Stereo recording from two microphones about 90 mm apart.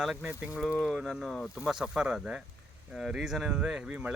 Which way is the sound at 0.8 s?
Centre (ahead or behind).